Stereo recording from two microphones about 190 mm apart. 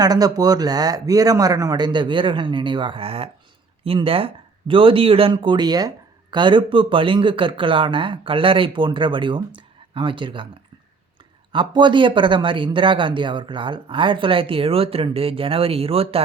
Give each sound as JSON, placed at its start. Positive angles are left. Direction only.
{"t": 0.0, "sound": "speech", "side_deg": -20}
{"t": 11.5, "sound": "speech", "side_deg": -25}